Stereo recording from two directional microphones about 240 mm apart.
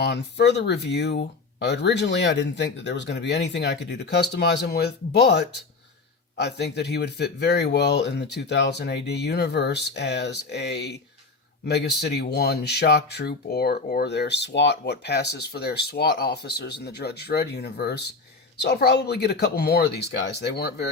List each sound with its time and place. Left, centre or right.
0.0 s speech: left